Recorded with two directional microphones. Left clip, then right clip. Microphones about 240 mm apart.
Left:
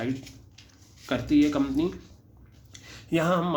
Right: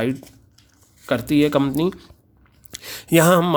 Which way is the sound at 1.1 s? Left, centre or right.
Right.